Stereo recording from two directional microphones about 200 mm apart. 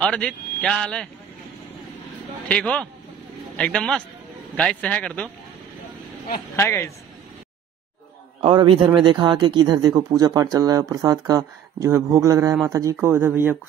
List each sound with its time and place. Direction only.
0.0 s speech: 5° left (ahead or behind)
2.4 s speech: 5° left (ahead or behind)
6.5 s speech: 10° left (ahead or behind)
8.4 s a man's voice: 25° right (ahead or behind); by 13.6 s 10° right (ahead or behind)